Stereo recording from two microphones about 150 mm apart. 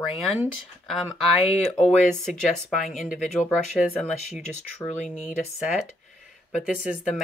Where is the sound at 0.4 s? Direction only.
Centre (ahead or behind).